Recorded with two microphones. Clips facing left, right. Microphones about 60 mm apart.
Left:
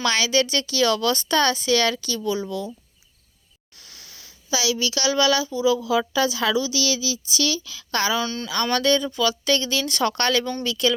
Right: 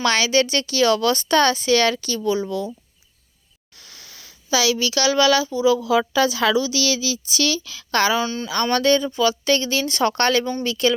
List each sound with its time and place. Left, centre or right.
0.0 s speech: right
3.8 s speech: right
8.2 s a woman's voice: centre
8.7 s speech: right